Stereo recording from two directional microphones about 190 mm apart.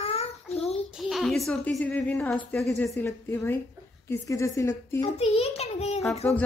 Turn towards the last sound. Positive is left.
turn(degrees=10)  # may be behind; listen again after turning